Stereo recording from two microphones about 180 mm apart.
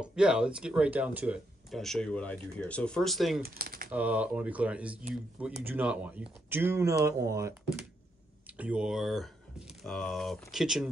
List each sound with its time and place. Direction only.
0.0 s speech: 5° right (ahead or behind)
3.4 s speech: 55° right (ahead or behind)
3.9 s speech: 10° right (ahead or behind)
8.5 s speech: 5° right (ahead or behind)